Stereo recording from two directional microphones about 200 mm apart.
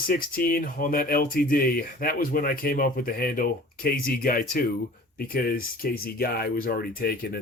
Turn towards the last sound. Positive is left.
turn(degrees=50)  # may be behind; listen again after turning